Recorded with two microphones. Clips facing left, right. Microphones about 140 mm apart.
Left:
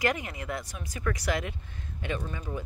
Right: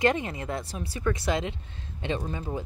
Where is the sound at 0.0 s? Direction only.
25° right (ahead or behind).